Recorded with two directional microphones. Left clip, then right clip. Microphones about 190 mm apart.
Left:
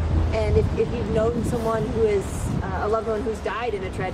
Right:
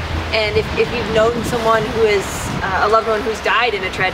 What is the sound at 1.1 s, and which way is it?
Speech, 25° right (ahead or behind).